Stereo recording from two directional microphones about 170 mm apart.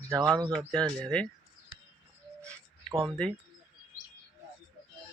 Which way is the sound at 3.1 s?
5° left (ahead or behind).